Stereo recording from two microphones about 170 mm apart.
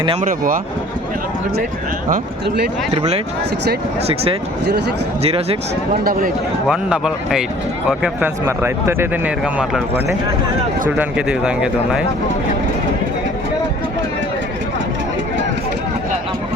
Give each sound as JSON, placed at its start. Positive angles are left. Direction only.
{"t": 0.2, "sound": "speech", "side_deg": -55}
{"t": 4.0, "sound": "speech", "side_deg": -35}
{"t": 5.9, "sound": "speech", "side_deg": -60}
{"t": 6.7, "sound": "speech", "side_deg": -5}
{"t": 9.4, "sound": "speech", "side_deg": -5}
{"t": 10.8, "sound": "speech", "side_deg": -10}